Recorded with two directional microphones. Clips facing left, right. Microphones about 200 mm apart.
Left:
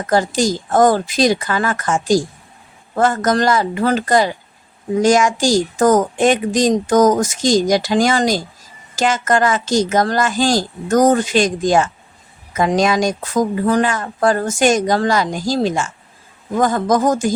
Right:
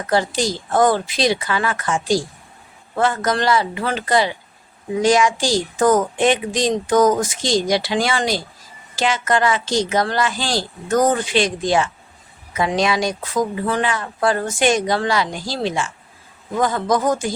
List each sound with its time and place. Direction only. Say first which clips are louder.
0.1 s speech: left 3 dB; 45° left (ahead or behind)